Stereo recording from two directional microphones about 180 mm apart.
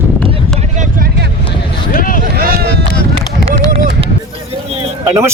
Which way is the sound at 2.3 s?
55° right (ahead or behind).